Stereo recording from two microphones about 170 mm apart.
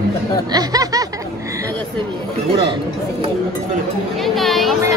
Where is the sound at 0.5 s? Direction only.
20° right (ahead or behind).